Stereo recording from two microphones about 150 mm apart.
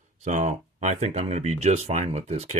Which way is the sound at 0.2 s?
55° right (ahead or behind).